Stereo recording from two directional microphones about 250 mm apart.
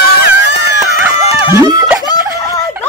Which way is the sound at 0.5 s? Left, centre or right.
Left.